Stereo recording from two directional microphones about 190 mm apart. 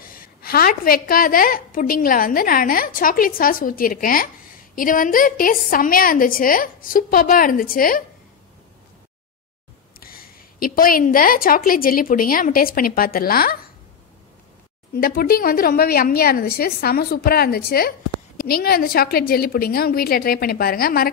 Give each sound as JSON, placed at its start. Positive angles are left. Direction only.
{"t": 0.0, "sound": "a woman's voice", "side_deg": 50}
{"t": 9.9, "sound": "a woman's voice", "side_deg": 50}
{"t": 15.0, "sound": "a woman's voice", "side_deg": 50}